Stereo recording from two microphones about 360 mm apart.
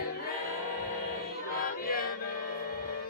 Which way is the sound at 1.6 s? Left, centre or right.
Left.